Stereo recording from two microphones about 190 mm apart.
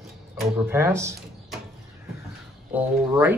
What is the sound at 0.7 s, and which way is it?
Speech, 15° right (ahead or behind).